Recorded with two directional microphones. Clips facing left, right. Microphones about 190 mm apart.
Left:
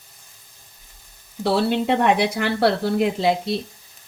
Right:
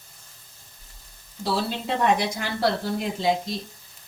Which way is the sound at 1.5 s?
65° left (ahead or behind).